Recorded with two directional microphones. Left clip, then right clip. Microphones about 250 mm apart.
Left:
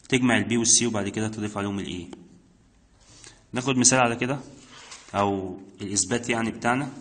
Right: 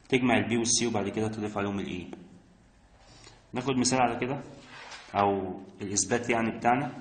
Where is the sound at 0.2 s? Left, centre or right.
Left.